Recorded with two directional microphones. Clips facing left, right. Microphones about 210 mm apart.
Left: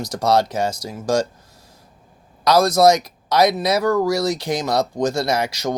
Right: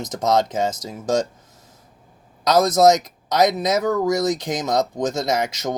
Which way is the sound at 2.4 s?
20° right (ahead or behind).